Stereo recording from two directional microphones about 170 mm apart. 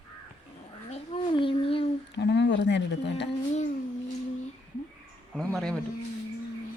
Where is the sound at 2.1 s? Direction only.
90° left.